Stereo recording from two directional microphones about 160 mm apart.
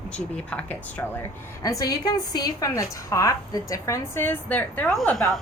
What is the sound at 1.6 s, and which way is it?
A woman's voice, 20° left (ahead or behind).